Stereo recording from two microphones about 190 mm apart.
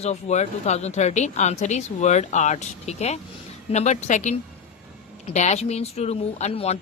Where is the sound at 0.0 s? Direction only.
35° left (ahead or behind).